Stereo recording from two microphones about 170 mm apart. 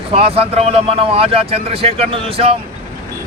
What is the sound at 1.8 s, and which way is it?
Speech, 35° right (ahead or behind).